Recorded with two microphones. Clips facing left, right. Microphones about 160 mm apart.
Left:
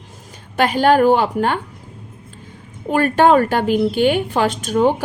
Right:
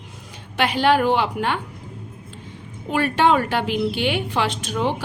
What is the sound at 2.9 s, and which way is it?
A woman's voice, 45° left (ahead or behind).